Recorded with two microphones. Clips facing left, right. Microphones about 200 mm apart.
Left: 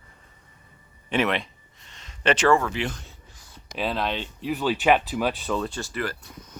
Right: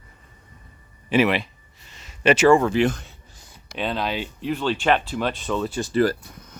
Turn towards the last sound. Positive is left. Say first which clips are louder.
# right 11 dB
turn(degrees=-35)  # may be behind; listen again after turning